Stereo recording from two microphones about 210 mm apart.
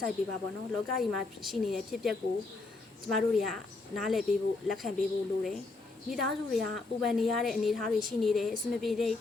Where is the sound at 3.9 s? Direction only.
Centre (ahead or behind).